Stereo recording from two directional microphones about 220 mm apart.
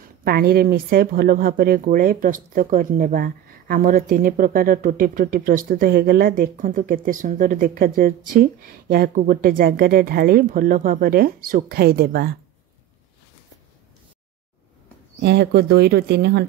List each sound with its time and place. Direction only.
0.2 s speech: 45° right (ahead or behind)
15.2 s speech: 50° right (ahead or behind)